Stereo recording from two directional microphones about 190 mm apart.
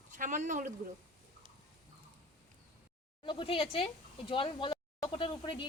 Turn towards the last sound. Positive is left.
turn(degrees=25)  # may be behind; listen again after turning